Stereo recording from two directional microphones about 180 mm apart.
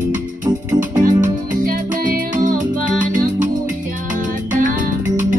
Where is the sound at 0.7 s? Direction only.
45° right (ahead or behind).